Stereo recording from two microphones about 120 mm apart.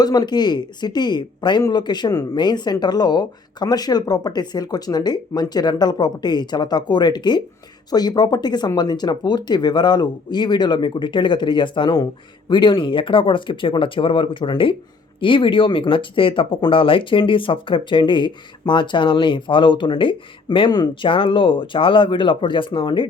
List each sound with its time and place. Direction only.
0.0 s speech: 35° left (ahead or behind)